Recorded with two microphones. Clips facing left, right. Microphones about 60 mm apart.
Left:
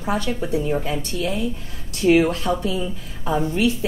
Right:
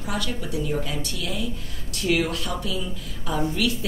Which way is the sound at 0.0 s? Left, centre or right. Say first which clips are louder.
Left 6 dB; left.